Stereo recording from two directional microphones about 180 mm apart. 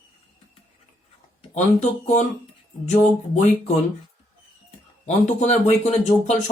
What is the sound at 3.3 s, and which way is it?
Speech, 40° left (ahead or behind).